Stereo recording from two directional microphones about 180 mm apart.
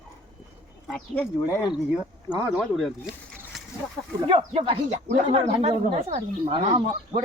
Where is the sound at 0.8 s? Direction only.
5° left (ahead or behind).